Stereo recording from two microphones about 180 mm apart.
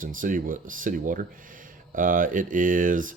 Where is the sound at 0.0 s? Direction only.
50° right (ahead or behind).